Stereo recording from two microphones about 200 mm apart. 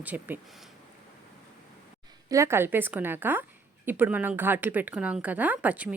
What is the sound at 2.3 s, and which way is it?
A woman's voice, 15° right (ahead or behind).